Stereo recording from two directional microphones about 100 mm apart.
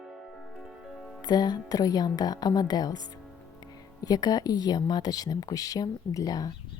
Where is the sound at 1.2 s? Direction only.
45° left (ahead or behind).